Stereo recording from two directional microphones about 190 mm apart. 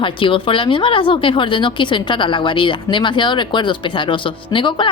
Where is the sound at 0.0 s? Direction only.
25° left (ahead or behind).